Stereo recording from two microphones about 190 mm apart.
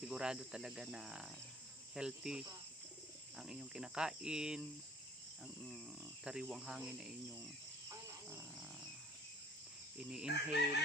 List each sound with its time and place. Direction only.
0.1 s cricket: 5° right (ahead or behind)
6.2 s cricket: 5° right (ahead or behind)
10.0 s cricket: 5° right (ahead or behind)